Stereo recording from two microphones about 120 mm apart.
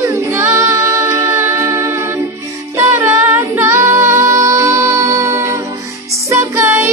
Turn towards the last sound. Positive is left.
turn(degrees=-20)  # may be behind; listen again after turning